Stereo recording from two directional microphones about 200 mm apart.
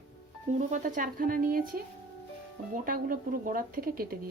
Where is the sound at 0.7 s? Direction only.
40° right (ahead or behind).